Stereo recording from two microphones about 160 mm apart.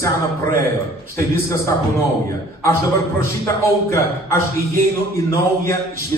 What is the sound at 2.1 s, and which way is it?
Speech, 70° right (ahead or behind).